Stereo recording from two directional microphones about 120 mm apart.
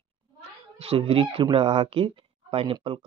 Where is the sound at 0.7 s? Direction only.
55° right (ahead or behind).